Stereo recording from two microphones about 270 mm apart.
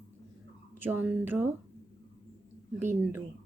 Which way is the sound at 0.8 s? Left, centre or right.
Centre.